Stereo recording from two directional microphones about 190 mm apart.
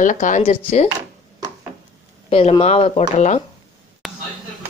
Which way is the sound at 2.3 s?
30° left (ahead or behind).